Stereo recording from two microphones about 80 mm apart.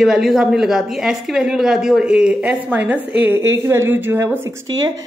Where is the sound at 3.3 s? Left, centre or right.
Right.